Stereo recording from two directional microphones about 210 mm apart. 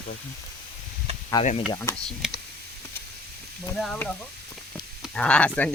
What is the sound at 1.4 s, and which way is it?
Speech, 25° left (ahead or behind).